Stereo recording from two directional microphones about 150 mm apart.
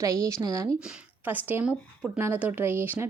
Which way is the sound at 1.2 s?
10° right (ahead or behind).